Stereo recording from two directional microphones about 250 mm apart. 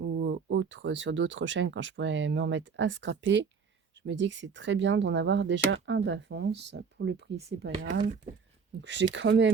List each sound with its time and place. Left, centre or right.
0.0 s speech: right